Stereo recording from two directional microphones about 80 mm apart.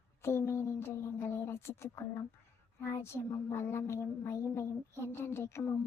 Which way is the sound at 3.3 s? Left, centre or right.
Left.